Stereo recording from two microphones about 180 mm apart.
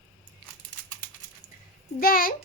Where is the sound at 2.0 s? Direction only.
55° left (ahead or behind).